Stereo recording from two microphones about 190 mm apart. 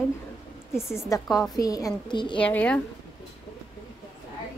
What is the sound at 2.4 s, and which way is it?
Speech, 5° left (ahead or behind).